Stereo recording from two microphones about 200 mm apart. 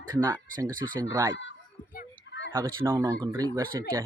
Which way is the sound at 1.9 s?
60° left (ahead or behind).